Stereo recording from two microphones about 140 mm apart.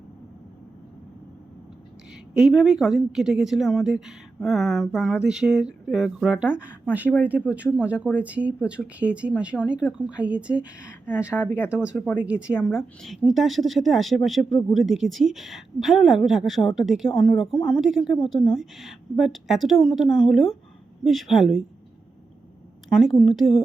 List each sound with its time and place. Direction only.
2.3 s speech: 5° right (ahead or behind)
11.3 s speech: 15° left (ahead or behind)
11.7 s speech: 10° right (ahead or behind)
11.9 s speech: 15° left (ahead or behind)
12.2 s speech: 10° right (ahead or behind)
22.9 s speech: centre (ahead or behind)